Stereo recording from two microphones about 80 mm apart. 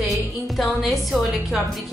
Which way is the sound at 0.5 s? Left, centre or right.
Centre.